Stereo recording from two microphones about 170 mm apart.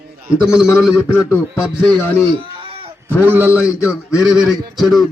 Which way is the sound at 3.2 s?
10° right (ahead or behind).